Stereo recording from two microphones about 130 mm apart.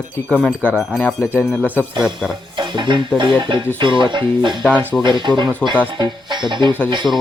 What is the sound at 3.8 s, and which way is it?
Speech, 40° right (ahead or behind).